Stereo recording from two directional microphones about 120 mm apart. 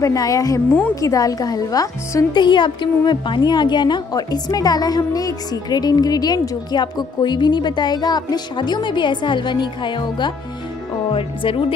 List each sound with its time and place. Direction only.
0.0 s a woman's voice: 30° left (ahead or behind); by 11.6 s 50° left (ahead or behind)